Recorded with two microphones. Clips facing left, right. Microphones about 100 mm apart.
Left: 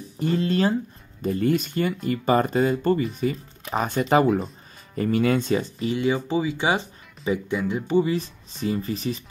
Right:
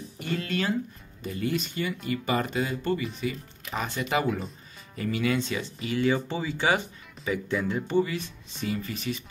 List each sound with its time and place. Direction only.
0.2 s speech: 35° left (ahead or behind)
1.2 s speech: 45° left (ahead or behind)
5.9 s speech: 15° left (ahead or behind)
8.0 s speech: 30° left (ahead or behind)